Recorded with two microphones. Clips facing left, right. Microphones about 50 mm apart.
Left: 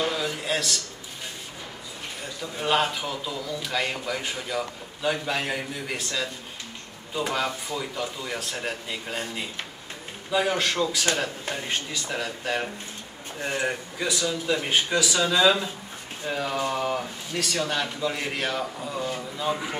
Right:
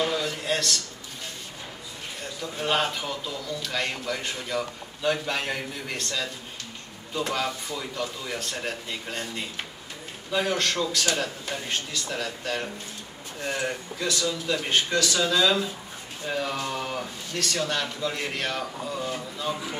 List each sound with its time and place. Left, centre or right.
0.0 s a sound: centre
2.5 s a man's voice: centre
16.3 s a man's voice: centre
19.5 s speech: left